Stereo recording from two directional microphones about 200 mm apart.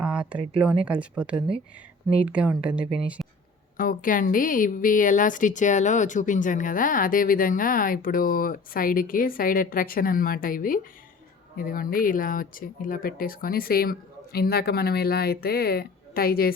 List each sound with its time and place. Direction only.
0.0 s speech: 5° right (ahead or behind)
1.4 s speech: 25° right (ahead or behind)
2.2 s speech: 5° right (ahead or behind)
3.8 s a woman's voice: 45° left (ahead or behind)